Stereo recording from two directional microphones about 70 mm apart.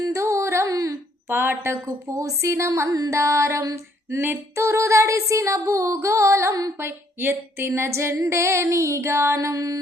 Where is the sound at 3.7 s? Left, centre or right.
Right.